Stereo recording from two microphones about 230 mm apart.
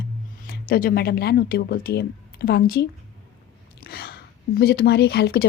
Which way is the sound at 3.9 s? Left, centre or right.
Left.